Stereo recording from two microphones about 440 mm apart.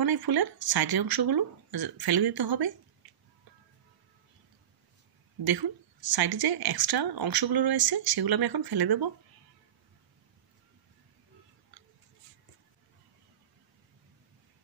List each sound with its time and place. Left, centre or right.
0.0 s speech: right
5.4 s speech: right